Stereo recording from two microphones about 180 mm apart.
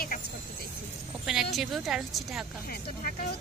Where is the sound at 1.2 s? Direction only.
Centre (ahead or behind).